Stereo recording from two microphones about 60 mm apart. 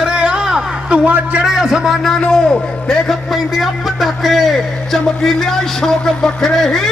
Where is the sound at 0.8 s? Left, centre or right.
Right.